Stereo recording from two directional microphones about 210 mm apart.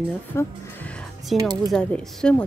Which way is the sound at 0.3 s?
10° left (ahead or behind).